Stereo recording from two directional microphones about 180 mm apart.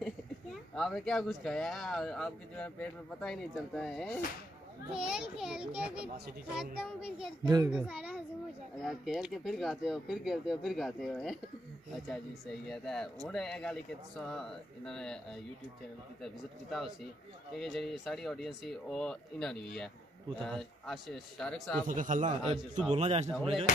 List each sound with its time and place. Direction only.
0.0 s speech: centre (ahead or behind)
7.4 s a child's voice: 20° right (ahead or behind)
7.7 s a child's voice: 10° right (ahead or behind)
17.6 s speech: centre (ahead or behind)
21.8 s a man's voice: 45° right (ahead or behind)